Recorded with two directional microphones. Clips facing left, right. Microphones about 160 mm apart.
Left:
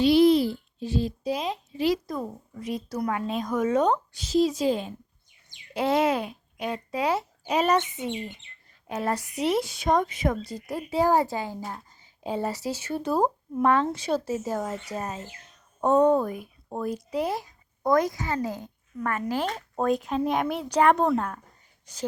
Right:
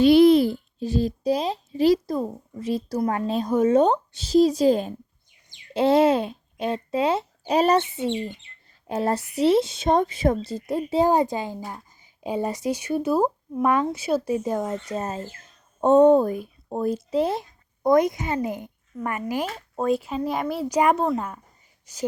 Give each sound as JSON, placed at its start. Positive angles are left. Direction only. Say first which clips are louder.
{"t": 0.0, "sound": "a child's voice", "louder": "right 4 dB", "side_deg": -55}
{"t": 5.7, "sound": "a woman's voice", "louder": "right 5 dB", "side_deg": -30}
{"t": 14.6, "sound": "speech", "louder": "right 4 dB", "side_deg": 5}
{"t": 15.8, "sound": "speech", "louder": "right 5 dB", "side_deg": -25}